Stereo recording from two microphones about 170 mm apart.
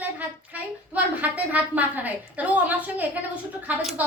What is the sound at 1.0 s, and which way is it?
A woman's voice, 10° right (ahead or behind).